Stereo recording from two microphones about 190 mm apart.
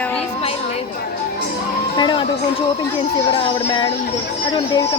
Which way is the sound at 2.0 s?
25° left (ahead or behind).